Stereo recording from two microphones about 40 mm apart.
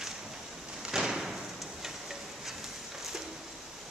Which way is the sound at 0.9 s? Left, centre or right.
Centre.